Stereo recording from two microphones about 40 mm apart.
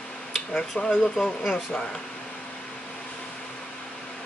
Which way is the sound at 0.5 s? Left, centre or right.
Left.